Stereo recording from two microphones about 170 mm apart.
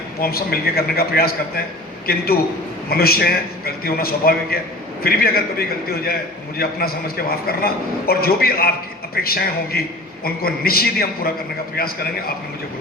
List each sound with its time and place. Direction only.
0.2 s a man's voice: 65° left (ahead or behind)